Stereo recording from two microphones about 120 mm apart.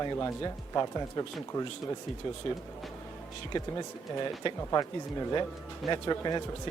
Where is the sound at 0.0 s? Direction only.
25° left (ahead or behind).